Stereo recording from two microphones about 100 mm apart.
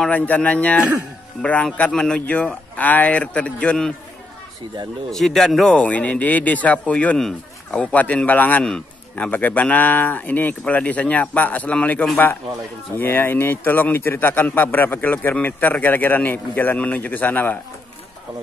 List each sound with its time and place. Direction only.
0.0 s a man's voice: 15° left (ahead or behind)
5.1 s a man's voice: 5° left (ahead or behind); by 17.6 s 20° left (ahead or behind)